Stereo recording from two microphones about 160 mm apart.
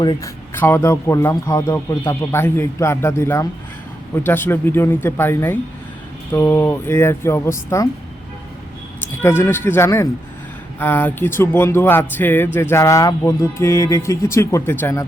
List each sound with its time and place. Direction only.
0.0 s speech: 30° left (ahead or behind)
0.5 s a man's voice: 15° left (ahead or behind)
9.2 s a man's voice: 15° left (ahead or behind)